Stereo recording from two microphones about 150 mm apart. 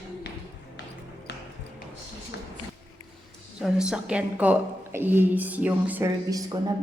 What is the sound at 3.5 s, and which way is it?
A woman's voice, 5° right (ahead or behind).